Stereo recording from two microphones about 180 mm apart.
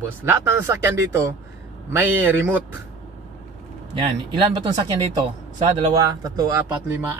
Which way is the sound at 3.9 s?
25° right (ahead or behind).